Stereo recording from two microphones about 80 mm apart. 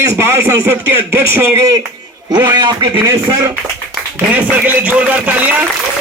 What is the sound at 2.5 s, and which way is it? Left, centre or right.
Speech, right.